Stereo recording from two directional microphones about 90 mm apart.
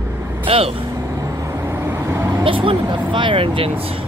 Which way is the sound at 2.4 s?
75° right (ahead or behind).